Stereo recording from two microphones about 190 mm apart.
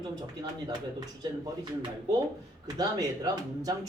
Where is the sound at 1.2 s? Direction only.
20° right (ahead or behind).